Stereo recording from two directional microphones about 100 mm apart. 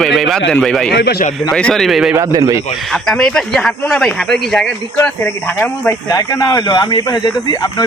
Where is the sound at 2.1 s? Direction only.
35° right (ahead or behind).